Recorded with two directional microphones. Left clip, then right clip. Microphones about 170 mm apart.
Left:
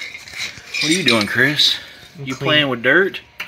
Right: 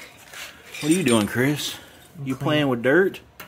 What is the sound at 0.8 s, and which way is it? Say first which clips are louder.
Speech: left 4 dB; 10° right (ahead or behind).